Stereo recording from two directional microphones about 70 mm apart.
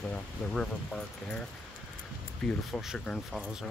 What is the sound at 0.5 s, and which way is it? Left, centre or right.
Speech, centre.